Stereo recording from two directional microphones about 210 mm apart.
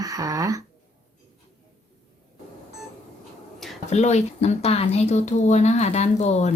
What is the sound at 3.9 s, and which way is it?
Speech, 35° left (ahead or behind).